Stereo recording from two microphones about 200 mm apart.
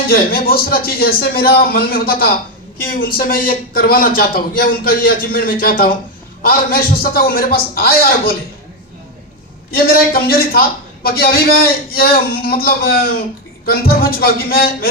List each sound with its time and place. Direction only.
0.1 s a man's voice: 50° left (ahead or behind)
9.7 s a man's voice: 45° left (ahead or behind)